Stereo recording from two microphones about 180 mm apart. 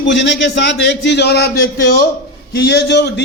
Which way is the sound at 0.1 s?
75° left (ahead or behind).